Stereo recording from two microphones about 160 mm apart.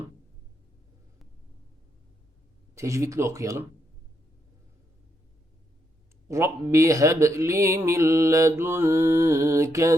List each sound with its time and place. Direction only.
2.7 s speech: 20° right (ahead or behind)
6.2 s speech: 15° right (ahead or behind)